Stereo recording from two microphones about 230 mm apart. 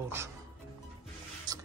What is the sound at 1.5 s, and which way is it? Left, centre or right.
Music, centre.